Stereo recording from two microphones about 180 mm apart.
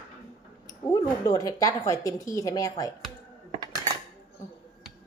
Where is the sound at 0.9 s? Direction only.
20° left (ahead or behind).